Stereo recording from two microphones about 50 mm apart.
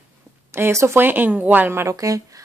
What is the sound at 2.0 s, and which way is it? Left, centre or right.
Speech, right.